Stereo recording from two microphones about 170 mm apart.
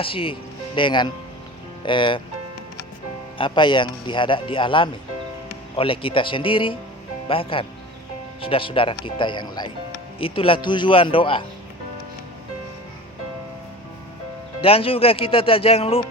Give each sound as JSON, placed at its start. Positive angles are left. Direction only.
{"t": 0.0, "sound": "speech", "side_deg": 30}
{"t": 3.3, "sound": "speech", "side_deg": 30}
{"t": 14.6, "sound": "speech", "side_deg": 35}